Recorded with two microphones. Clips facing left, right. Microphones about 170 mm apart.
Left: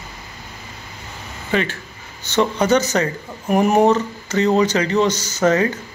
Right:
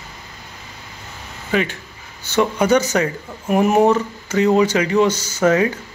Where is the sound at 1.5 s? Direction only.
10° right (ahead or behind).